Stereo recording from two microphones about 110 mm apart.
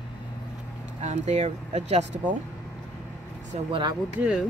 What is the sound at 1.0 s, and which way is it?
Speech, 90° right.